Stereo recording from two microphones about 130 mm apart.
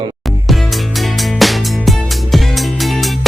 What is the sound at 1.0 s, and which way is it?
Music, centre (ahead or behind).